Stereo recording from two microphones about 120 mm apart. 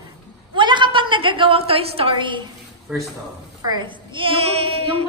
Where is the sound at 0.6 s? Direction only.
40° right (ahead or behind).